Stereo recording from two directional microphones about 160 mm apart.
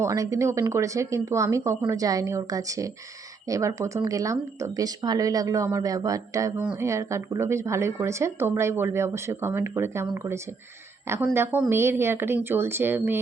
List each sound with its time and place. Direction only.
0.0 s speech: 20° right (ahead or behind)
11.7 s speech: 15° right (ahead or behind)